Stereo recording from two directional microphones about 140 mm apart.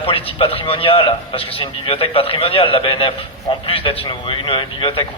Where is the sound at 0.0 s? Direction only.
40° left (ahead or behind).